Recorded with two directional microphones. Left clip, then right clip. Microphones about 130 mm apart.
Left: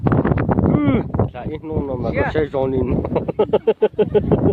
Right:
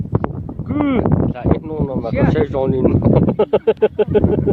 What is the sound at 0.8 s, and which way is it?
Speech, 10° right (ahead or behind).